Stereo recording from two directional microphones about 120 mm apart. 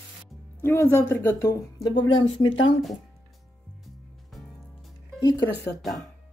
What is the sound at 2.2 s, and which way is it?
Speech, 45° left (ahead or behind).